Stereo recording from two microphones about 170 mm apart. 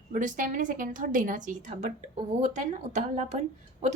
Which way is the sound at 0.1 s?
50° right (ahead or behind).